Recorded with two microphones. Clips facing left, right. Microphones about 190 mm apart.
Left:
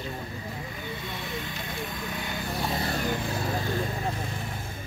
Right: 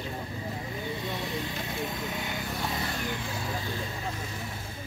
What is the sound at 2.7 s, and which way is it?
Vehicle, 35° left (ahead or behind).